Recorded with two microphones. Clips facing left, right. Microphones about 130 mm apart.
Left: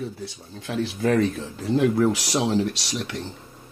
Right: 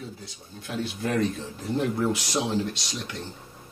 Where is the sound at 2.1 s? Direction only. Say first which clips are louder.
Left 4 dB; 75° left (ahead or behind).